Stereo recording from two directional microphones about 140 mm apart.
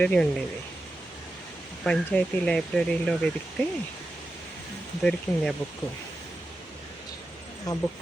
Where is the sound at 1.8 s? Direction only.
5° left (ahead or behind).